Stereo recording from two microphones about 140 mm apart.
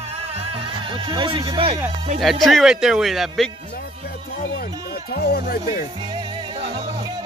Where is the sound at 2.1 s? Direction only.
Centre (ahead or behind).